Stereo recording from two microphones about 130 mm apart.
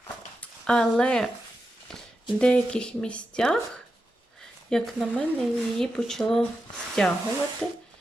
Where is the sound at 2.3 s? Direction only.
5° left (ahead or behind).